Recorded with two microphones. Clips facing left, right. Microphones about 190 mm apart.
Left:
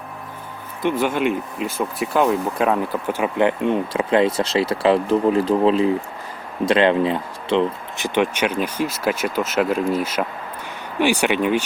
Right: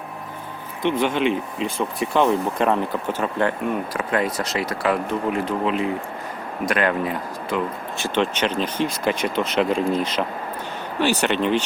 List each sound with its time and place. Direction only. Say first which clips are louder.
0.8 s speech: left 1 dB; 5° left (ahead or behind)